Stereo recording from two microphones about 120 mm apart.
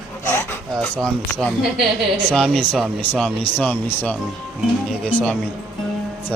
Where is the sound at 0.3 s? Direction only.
20° left (ahead or behind).